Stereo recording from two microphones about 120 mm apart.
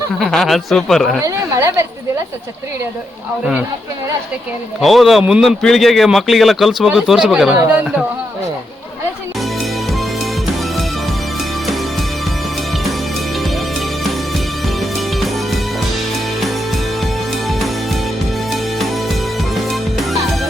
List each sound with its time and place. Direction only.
0.2 s speech: centre (ahead or behind)
1.2 s a woman's voice: 25° right (ahead or behind)
4.8 s speech: centre (ahead or behind)
7.7 s a sound: 10° right (ahead or behind)
14.8 s music: centre (ahead or behind)
18.5 s music: centre (ahead or behind)